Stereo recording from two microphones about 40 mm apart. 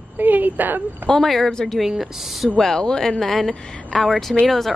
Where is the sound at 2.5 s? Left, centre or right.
Centre.